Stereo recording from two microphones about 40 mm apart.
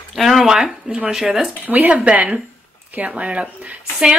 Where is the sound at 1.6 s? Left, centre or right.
Right.